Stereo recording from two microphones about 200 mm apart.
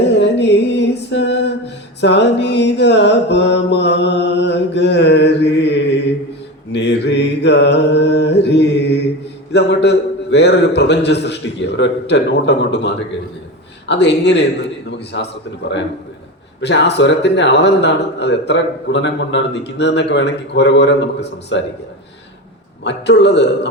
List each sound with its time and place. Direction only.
0.1 s a sound: 60° left (ahead or behind)
6.7 s a man's voice: 60° left (ahead or behind)
16.6 s a man's voice: 60° left (ahead or behind)
22.8 s a man's voice: 60° left (ahead or behind)